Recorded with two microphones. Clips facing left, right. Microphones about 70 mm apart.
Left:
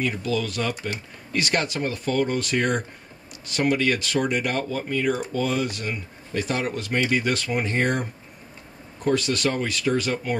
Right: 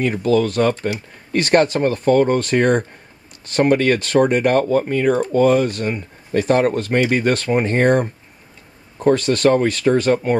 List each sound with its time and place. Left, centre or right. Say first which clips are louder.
0.0 s speech: right 9 dB; right